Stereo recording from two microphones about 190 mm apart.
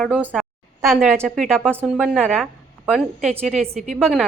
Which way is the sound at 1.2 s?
Centre (ahead or behind).